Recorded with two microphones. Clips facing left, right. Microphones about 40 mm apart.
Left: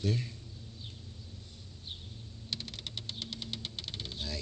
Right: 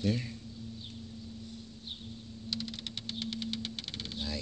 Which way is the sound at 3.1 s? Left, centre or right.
Right.